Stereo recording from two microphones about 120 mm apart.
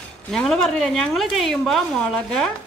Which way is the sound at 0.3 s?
5° left (ahead or behind).